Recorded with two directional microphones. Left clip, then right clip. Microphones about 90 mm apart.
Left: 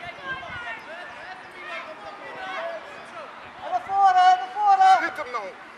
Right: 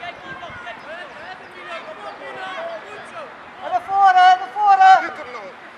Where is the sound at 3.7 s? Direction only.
25° right (ahead or behind).